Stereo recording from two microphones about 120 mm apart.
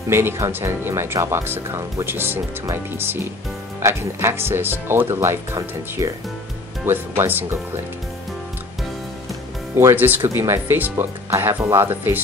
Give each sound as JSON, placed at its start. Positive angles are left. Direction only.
{"t": 0.1, "sound": "speech", "side_deg": -20}
{"t": 9.8, "sound": "speech", "side_deg": -20}